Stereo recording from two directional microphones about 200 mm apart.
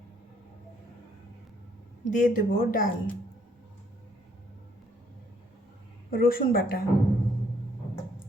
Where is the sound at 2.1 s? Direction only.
45° left (ahead or behind).